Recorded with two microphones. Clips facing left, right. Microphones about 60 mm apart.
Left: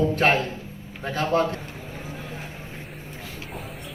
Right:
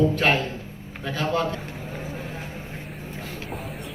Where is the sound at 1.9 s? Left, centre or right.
Right.